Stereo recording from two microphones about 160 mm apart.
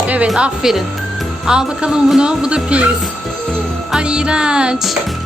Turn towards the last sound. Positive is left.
turn(degrees=-5)  # may be behind; listen again after turning